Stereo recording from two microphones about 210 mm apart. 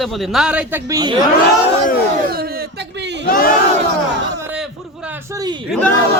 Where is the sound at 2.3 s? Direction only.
45° right (ahead or behind).